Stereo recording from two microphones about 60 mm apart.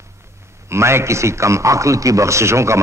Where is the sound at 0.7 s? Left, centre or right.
Right.